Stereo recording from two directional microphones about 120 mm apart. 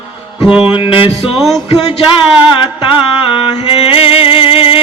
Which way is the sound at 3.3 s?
50° left (ahead or behind).